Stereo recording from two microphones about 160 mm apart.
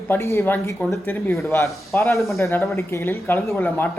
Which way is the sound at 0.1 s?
15° left (ahead or behind).